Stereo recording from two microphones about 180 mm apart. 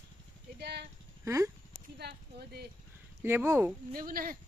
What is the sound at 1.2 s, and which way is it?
Speech, 15° right (ahead or behind).